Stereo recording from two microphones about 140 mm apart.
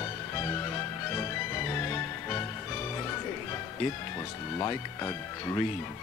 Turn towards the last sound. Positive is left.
turn(degrees=20)  # may be behind; listen again after turning